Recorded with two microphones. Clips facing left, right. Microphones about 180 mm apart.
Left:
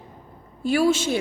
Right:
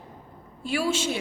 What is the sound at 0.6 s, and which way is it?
Speech, 40° left (ahead or behind).